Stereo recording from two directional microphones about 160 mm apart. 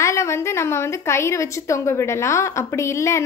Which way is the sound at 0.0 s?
20° left (ahead or behind).